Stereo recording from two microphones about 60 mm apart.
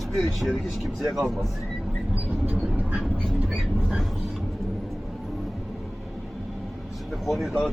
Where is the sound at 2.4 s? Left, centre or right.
Right.